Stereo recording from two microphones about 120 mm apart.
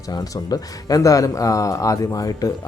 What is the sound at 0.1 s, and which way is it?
A man's voice, 35° left (ahead or behind).